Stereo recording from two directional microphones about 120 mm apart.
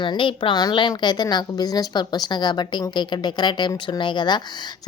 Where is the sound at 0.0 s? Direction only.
45° left (ahead or behind).